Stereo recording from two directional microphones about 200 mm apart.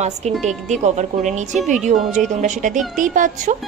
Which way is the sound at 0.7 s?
35° right (ahead or behind).